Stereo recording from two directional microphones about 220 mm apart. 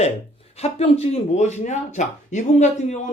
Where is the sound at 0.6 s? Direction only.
30° left (ahead or behind).